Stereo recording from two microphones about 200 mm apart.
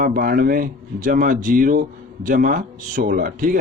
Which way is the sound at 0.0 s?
45° right (ahead or behind).